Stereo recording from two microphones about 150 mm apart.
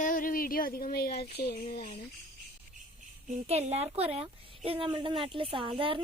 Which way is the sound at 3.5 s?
45° right (ahead or behind).